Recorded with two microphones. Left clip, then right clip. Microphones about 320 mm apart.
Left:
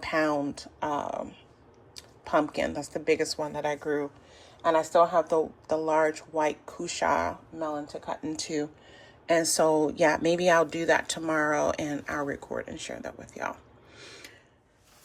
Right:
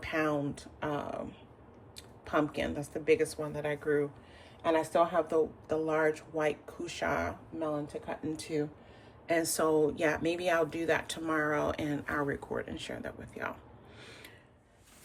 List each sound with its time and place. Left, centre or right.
0.0 s speech: centre
14.0 s gasp: centre